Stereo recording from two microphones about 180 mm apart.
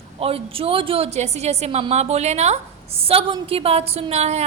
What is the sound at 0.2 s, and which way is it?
A woman's voice, 30° right (ahead or behind).